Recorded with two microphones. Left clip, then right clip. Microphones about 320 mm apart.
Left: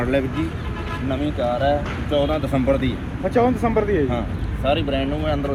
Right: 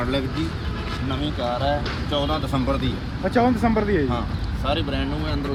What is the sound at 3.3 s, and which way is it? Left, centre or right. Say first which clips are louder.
Speech: left 2 dB; right.